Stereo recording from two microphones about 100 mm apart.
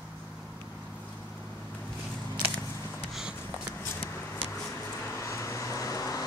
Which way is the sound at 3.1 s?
5° right (ahead or behind).